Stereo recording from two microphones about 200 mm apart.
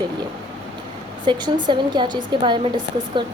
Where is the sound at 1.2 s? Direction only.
20° right (ahead or behind).